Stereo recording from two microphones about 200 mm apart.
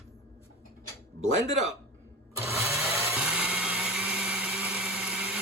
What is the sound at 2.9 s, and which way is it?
Vehicle, 15° right (ahead or behind).